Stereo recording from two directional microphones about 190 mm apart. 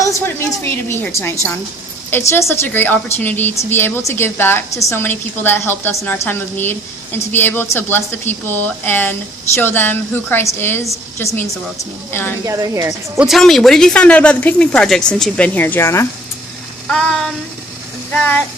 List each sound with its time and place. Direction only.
0.0 s a woman's voice: 15° left (ahead or behind)
12.5 s a woman's voice: 15° right (ahead or behind)
13.1 s speech: centre (ahead or behind); by 16.0 s 15° left (ahead or behind)
16.9 s a woman's voice: 5° left (ahead or behind)